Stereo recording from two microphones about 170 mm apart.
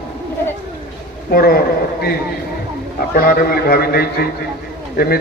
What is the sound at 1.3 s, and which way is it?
Speech, 60° left (ahead or behind).